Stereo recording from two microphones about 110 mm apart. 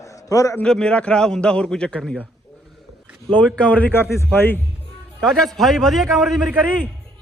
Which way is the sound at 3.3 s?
10° left (ahead or behind).